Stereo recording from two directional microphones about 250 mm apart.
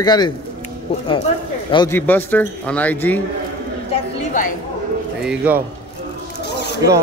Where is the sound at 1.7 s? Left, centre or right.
Centre.